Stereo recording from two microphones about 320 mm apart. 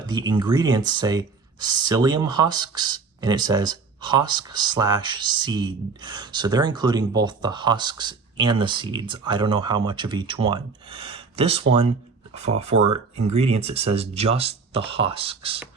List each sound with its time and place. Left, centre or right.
0.0 s speech: centre
13.1 s speech: centre